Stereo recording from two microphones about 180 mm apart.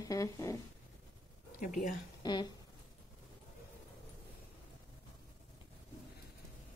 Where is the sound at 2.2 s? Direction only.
25° left (ahead or behind).